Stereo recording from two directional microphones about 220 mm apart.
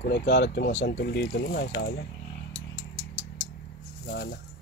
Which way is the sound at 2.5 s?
55° left (ahead or behind).